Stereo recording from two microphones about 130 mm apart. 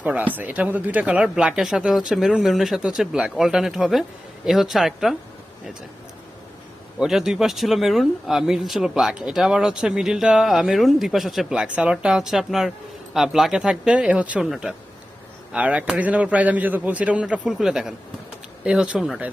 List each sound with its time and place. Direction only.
0.0 s speech: 10° right (ahead or behind)
7.0 s a man's voice: 5° right (ahead or behind)